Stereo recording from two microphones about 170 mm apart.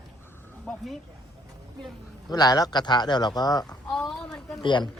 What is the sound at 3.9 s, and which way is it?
Speech, 5° left (ahead or behind).